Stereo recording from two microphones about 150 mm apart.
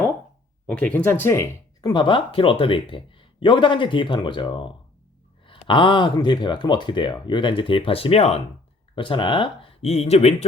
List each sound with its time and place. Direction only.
0.7 s speech: 10° left (ahead or behind)
1.9 s speech: 35° left (ahead or behind)